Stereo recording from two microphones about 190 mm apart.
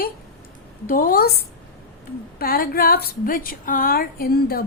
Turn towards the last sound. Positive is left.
turn(degrees=50)  # may be behind; listen again after turning